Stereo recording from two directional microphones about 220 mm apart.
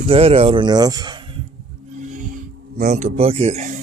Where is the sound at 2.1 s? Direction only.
35° right (ahead or behind).